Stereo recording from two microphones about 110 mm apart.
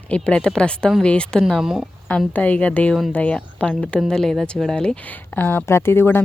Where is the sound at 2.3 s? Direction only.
15° left (ahead or behind).